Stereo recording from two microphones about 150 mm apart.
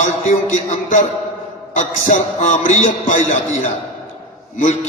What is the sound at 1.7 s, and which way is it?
A man's voice, 55° left (ahead or behind).